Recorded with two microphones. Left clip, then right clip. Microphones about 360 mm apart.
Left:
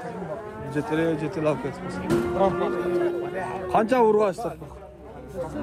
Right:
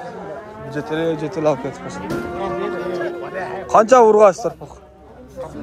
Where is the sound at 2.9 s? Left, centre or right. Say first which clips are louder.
Right 1 dB; right.